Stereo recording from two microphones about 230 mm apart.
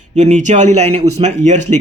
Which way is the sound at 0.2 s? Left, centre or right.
Right.